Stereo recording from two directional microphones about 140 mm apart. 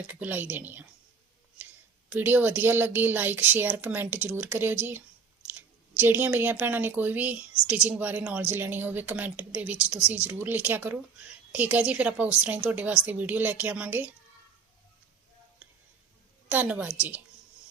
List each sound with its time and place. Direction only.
0.1 s speech: 15° right (ahead or behind)
2.1 s speech: 15° right (ahead or behind)
16.5 s speech: 10° right (ahead or behind)